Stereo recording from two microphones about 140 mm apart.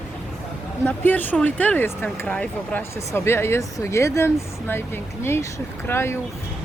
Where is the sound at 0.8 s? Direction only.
15° left (ahead or behind).